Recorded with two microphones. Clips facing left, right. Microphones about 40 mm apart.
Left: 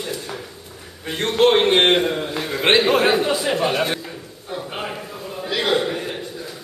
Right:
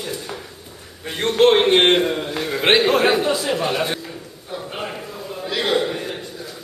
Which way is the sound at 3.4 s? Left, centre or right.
Centre.